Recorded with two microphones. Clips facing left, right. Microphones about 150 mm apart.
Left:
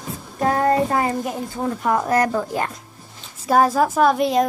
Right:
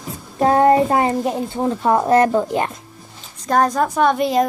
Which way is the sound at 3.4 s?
5° left (ahead or behind).